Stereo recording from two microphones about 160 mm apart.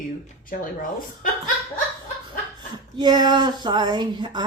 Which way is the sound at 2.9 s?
25° right (ahead or behind).